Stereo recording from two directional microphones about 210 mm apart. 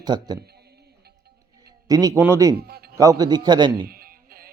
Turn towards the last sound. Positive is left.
turn(degrees=-45)  # may be behind; listen again after turning